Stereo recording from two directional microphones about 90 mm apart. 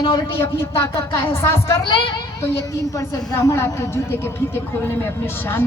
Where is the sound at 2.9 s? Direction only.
40° left (ahead or behind).